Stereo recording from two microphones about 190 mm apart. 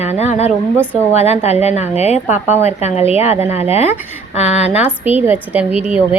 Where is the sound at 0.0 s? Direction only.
35° left (ahead or behind).